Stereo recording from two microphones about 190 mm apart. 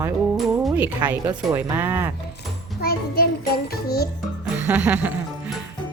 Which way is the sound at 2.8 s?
55° left (ahead or behind).